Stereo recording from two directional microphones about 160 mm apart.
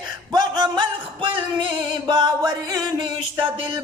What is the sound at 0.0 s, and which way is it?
Music, 25° right (ahead or behind).